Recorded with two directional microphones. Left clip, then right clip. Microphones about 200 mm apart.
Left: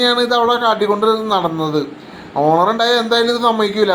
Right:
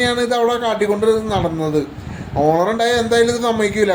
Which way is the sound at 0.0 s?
10° right (ahead or behind).